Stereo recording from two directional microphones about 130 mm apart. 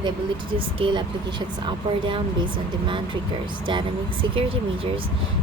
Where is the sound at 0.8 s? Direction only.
40° right (ahead or behind).